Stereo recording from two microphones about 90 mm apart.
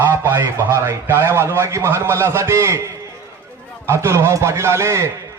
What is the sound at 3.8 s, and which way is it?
A man's voice, 30° right (ahead or behind).